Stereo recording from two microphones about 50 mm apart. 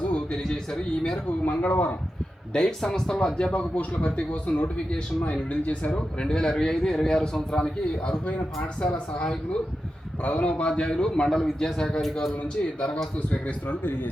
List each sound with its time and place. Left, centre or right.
0.1 s speech: centre
1.5 s speech: left
2.5 s a man's voice: centre
3.5 s speech: left
6.2 s a man's voice: centre
10.2 s a man's voice: left; by 12.3 s centre
13.1 s speech: left
13.7 s speech: left